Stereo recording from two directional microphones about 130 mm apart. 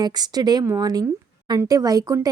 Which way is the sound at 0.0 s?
30° right (ahead or behind).